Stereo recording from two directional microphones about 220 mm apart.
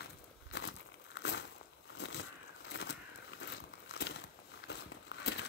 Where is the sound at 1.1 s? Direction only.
50° left (ahead or behind).